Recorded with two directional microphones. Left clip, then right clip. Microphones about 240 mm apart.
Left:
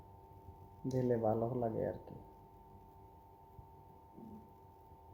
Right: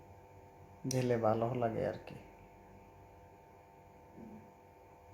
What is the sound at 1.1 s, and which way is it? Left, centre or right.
Speech, centre.